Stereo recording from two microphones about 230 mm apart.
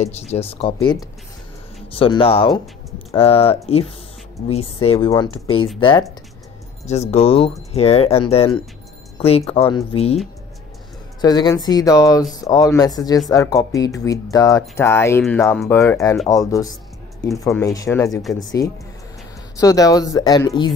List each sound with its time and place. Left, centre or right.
0.0 s speech: left
2.0 s speech: left
9.5 s speech: left
11.1 s speech: centre